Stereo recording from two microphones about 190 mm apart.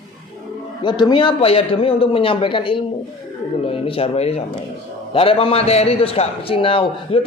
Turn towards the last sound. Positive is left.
turn(degrees=30)  # may be behind; listen again after turning